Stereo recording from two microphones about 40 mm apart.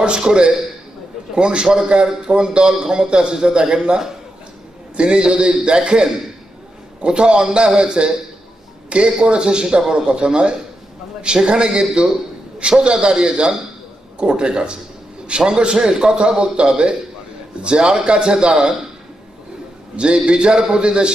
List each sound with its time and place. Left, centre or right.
0.0 s a man's voice: right
20.0 s a man's voice: right